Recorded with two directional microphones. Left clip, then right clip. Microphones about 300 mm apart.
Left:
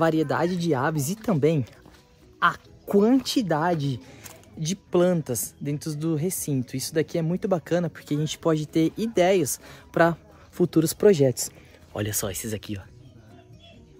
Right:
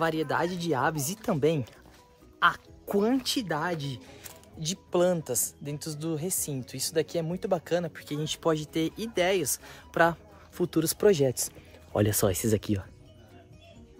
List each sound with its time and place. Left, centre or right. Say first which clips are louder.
0.0 s speech: left 5 dB; centre
8.1 s speech: left 3 dB; centre
12.0 s speech: right 4 dB; right